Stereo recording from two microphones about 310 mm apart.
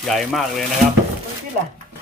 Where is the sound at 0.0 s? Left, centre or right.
Centre.